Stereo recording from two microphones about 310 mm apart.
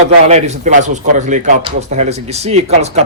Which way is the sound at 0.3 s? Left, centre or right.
Right.